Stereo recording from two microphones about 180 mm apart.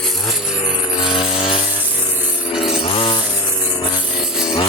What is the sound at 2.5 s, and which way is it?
Chainsaw, 30° left (ahead or behind).